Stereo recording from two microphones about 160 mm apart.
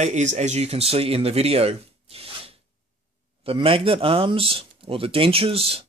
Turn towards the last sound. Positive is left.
turn(degrees=-35)  # may be behind; listen again after turning